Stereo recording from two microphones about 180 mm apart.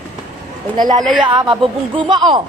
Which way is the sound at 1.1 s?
25° right (ahead or behind).